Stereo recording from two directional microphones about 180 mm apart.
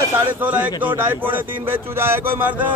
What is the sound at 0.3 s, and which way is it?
Speech, 10° right (ahead or behind).